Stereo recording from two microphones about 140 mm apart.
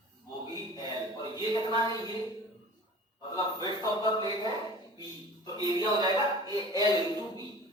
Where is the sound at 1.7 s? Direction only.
25° left (ahead or behind).